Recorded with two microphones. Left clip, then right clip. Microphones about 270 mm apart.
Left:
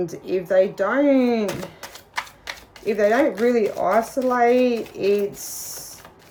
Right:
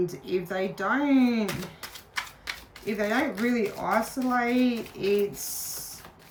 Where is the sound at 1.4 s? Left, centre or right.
Centre.